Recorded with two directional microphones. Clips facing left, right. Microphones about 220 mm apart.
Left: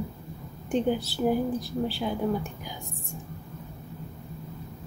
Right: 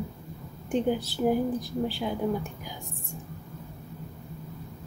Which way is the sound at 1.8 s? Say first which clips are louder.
Left 1 dB; 15° right (ahead or behind).